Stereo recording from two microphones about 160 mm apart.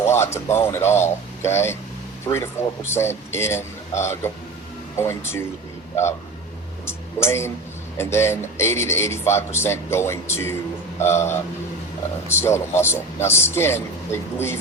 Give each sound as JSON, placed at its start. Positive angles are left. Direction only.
{"t": 0.0, "sound": "a man's voice", "side_deg": 15}
{"t": 6.8, "sound": "a sound", "side_deg": 15}
{"t": 7.9, "sound": "a man's voice", "side_deg": 15}